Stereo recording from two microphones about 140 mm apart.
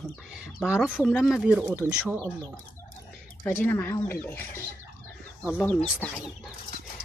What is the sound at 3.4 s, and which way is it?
Speech, 10° left (ahead or behind).